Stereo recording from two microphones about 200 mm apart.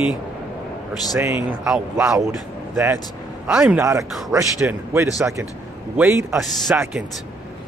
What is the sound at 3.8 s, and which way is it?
A man's voice, 15° right (ahead or behind).